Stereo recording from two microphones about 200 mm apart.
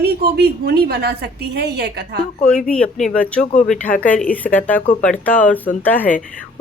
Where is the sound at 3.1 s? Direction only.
5° left (ahead or behind).